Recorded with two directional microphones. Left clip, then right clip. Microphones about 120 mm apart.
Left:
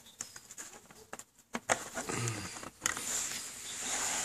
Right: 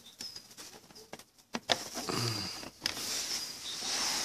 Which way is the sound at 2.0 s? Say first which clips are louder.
Right 6 dB; 30° right (ahead or behind).